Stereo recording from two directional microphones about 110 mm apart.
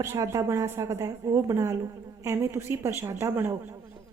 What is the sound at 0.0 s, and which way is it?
A woman's voice, 25° right (ahead or behind).